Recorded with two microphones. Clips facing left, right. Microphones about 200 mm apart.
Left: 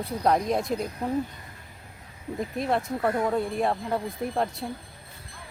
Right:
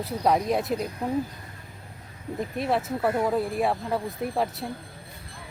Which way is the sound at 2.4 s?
Centre (ahead or behind).